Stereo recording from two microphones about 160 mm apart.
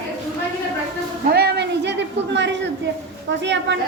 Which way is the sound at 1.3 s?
90° right.